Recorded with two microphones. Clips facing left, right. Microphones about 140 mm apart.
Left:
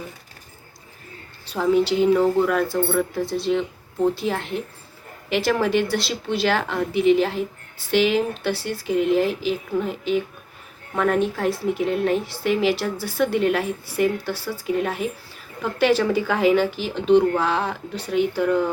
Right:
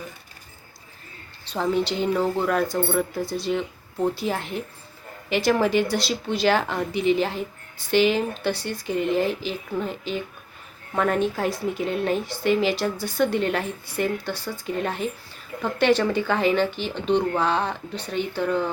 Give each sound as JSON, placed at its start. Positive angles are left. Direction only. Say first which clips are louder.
{"t": 1.5, "sound": "speech", "louder": "left 5 dB", "side_deg": 5}